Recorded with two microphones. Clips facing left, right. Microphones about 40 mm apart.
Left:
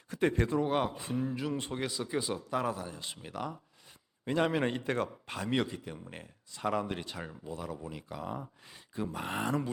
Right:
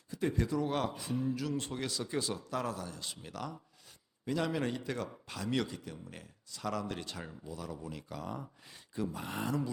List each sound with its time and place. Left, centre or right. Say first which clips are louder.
0.1 s speech: left 5 dB; left
0.3 s speech: left 3 dB; left
0.7 s a man's voice: left 4 dB; centre
0.9 s a man's voice: left 1 dB; left
4.3 s a man's voice: left 4 dB; left; by 8.4 s centre
9.1 s speech: left 5 dB; left